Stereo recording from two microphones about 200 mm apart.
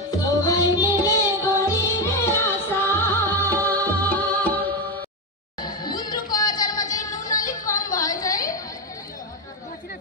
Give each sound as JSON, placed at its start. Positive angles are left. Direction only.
{"t": 0.2, "sound": "music", "side_deg": 15}
{"t": 5.6, "sound": "music", "side_deg": 20}